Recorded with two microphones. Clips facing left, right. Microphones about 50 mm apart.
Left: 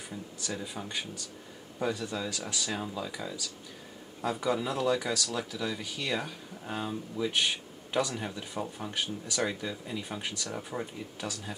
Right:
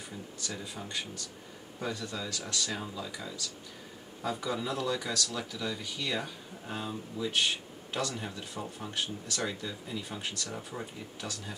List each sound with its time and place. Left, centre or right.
0.4 s speech: centre
8.8 s speech: centre